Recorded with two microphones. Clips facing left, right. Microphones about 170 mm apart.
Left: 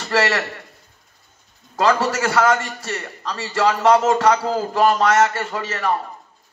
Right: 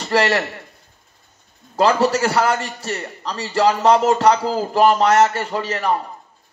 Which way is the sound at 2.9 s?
25° right (ahead or behind).